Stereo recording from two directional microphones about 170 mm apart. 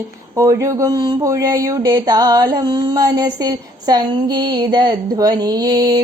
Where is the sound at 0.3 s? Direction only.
20° right (ahead or behind).